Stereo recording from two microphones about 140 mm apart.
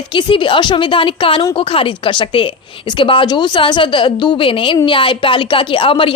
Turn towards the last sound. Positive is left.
turn(degrees=40)  # may be behind; listen again after turning